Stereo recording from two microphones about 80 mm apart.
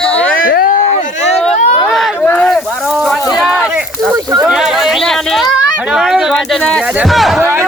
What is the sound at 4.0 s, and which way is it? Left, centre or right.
Speech, right.